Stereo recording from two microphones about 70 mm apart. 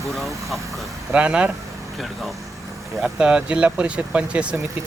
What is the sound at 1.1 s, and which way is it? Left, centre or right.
Speech, centre.